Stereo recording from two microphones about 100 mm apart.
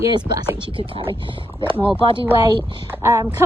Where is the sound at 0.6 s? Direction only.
60° right (ahead or behind).